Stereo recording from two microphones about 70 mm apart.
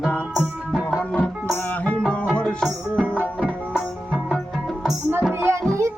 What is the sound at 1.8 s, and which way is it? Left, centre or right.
Music, centre.